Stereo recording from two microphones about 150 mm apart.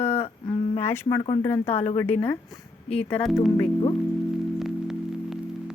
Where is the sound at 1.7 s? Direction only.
50° left (ahead or behind).